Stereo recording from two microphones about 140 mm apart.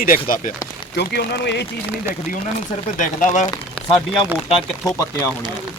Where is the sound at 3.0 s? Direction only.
65° left (ahead or behind).